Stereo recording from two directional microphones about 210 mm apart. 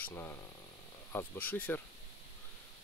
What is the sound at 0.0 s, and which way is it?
Speech, 10° left (ahead or behind).